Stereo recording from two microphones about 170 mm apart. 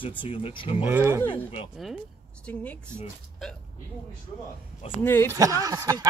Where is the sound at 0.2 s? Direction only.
30° left (ahead or behind).